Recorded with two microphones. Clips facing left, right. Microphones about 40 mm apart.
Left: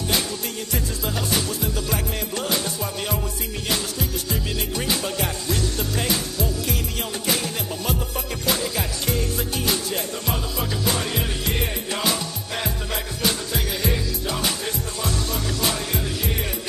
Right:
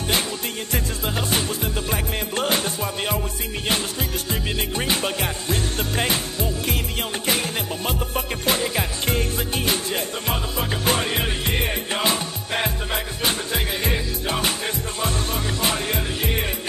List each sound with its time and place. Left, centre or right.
0.7 s music: right
4.3 s music: right